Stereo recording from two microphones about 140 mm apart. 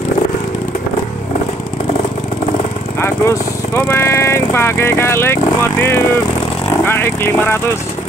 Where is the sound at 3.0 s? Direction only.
15° left (ahead or behind).